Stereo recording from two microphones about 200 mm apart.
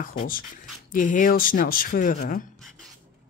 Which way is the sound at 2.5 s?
Centre (ahead or behind).